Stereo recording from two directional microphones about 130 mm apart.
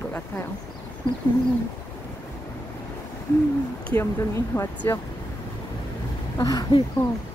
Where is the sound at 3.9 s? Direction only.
20° left (ahead or behind).